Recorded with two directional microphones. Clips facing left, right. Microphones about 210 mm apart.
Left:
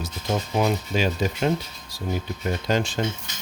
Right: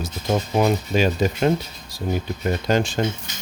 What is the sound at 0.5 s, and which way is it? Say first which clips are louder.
Speech: right 3 dB; 50° right (ahead or behind).